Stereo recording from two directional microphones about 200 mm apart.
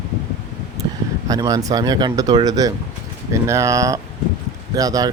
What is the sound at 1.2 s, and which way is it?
Speech, 15° right (ahead or behind).